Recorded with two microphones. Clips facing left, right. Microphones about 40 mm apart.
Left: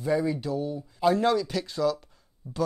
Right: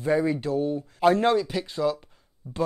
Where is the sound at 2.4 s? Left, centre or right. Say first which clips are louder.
Right 1 dB; right.